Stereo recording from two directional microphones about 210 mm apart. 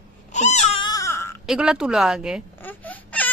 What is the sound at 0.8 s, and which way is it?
Wail, 15° left (ahead or behind).